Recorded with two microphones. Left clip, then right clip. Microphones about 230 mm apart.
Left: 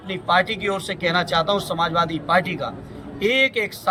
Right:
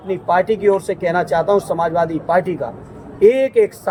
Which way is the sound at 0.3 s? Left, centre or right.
Centre.